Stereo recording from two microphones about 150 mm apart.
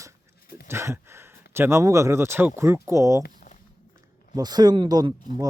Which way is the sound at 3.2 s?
65° left (ahead or behind).